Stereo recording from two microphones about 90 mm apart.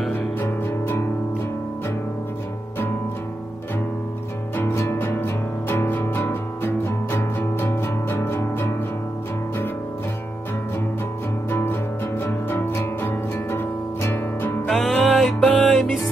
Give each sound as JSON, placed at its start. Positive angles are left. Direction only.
{"t": 0.1, "sound": "music", "side_deg": 25}
{"t": 4.6, "sound": "music", "side_deg": 25}
{"t": 11.5, "sound": "music", "side_deg": 25}
{"t": 14.7, "sound": "music", "side_deg": 0}